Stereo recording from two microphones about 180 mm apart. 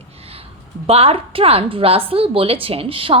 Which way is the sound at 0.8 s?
35° right (ahead or behind).